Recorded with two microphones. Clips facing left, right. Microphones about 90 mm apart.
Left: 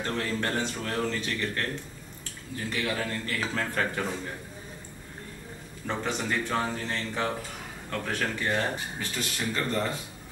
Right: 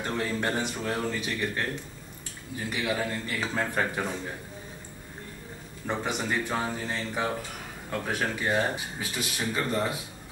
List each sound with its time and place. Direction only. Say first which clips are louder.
0.0 s speech: right 1 dB; 15° right (ahead or behind)
5.9 s speech: even; 15° right (ahead or behind)